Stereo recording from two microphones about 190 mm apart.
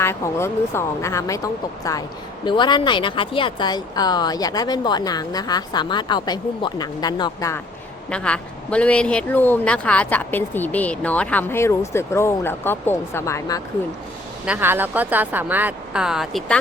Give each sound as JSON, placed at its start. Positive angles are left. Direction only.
{"t": 0.0, "sound": "speech", "side_deg": 15}
{"t": 8.1, "sound": "speech", "side_deg": 5}
{"t": 14.4, "sound": "speech", "side_deg": -10}